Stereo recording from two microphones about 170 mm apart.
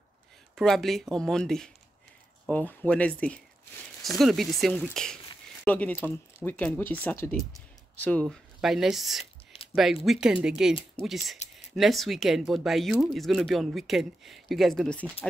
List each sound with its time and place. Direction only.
0.6 s speech: centre (ahead or behind)
8.5 s speech: 5° right (ahead or behind)
9.2 s a sound: 35° left (ahead or behind)
10.0 s speech: 5° right (ahead or behind)